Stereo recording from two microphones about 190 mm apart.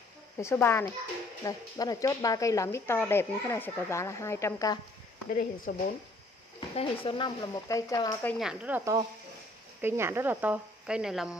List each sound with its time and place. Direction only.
0.4 s speech: 15° left (ahead or behind)
5.7 s speech: 55° left (ahead or behind)
6.7 s speech: 30° left (ahead or behind)
8.4 s speech: 5° right (ahead or behind)